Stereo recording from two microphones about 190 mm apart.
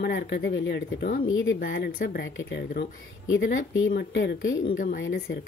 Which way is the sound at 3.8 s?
60° left (ahead or behind).